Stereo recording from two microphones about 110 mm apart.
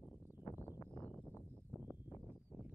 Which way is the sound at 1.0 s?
15° left (ahead or behind).